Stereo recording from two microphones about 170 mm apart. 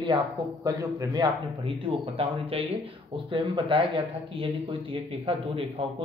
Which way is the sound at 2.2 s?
35° right (ahead or behind).